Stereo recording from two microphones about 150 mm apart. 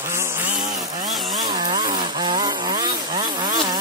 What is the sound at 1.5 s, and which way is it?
Chainsaw, 35° right (ahead or behind).